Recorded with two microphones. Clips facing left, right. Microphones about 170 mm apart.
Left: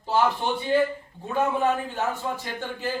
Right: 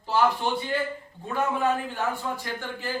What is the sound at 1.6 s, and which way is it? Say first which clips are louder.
Speech: left 1 dB; 20° left (ahead or behind).